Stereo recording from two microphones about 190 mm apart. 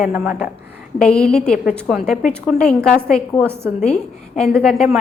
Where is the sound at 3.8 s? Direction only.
35° left (ahead or behind).